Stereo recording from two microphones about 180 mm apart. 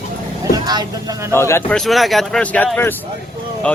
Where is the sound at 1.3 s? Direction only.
15° left (ahead or behind).